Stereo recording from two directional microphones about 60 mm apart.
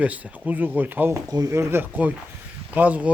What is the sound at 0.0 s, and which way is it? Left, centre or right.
Speech, right.